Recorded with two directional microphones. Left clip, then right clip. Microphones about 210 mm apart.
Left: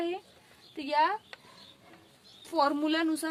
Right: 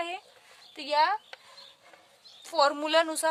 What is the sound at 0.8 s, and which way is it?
Speech, 30° right (ahead or behind).